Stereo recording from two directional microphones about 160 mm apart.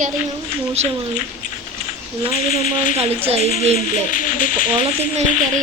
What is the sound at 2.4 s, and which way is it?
Speech, 55° left (ahead or behind).